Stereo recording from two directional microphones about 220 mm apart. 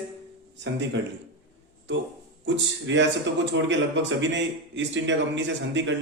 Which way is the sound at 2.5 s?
55° right (ahead or behind).